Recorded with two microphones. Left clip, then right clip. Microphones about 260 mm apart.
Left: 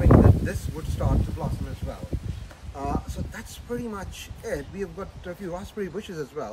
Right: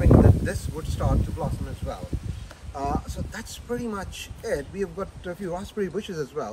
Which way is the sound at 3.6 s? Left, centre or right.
Centre.